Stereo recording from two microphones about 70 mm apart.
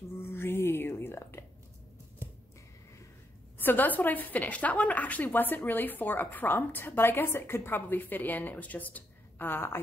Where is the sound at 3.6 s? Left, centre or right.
Left.